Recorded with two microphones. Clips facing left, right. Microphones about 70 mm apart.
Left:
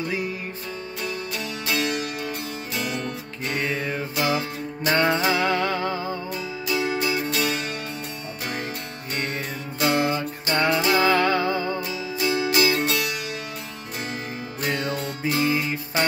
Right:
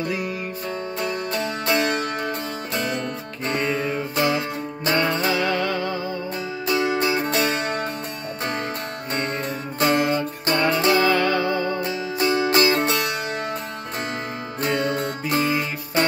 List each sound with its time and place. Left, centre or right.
1.0 s music: right
3.4 s music: right
5.3 s music: left
6.7 s music: right
9.8 s music: right
11.0 s music: centre
11.7 s music: right
14.6 s music: right